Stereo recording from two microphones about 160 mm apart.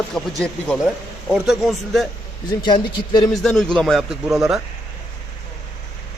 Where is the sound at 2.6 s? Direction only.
30° left (ahead or behind).